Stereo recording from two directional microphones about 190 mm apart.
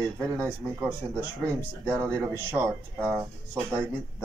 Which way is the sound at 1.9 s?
15° right (ahead or behind).